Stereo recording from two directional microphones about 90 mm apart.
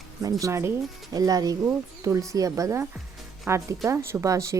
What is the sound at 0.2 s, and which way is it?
Speech, 40° right (ahead or behind).